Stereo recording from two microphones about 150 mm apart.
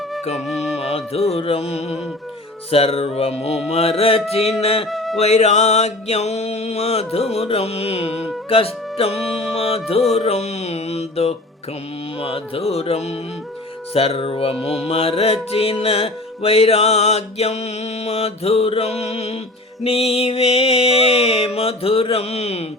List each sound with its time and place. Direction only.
0.4 s music: centre (ahead or behind)
0.8 s music: 40° left (ahead or behind)
4.9 s music: centre (ahead or behind)
5.1 s music: 45° left (ahead or behind)